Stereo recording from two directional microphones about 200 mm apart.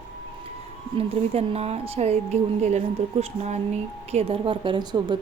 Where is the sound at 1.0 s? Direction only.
30° right (ahead or behind).